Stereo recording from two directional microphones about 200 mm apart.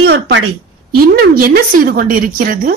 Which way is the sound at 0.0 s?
55° right (ahead or behind).